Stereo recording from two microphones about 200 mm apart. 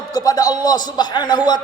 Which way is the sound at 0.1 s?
20° left (ahead or behind).